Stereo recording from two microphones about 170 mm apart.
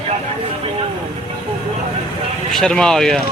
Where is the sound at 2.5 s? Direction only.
5° left (ahead or behind).